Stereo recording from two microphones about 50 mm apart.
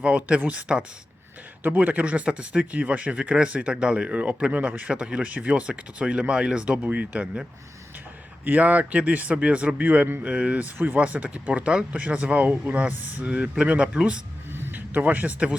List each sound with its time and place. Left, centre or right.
0.0 s speech: right
1.6 s speech: right
6.8 s speech: right
8.4 s speech: right
10.8 s speech: right
11.0 s speech: right
14.5 s a sound: right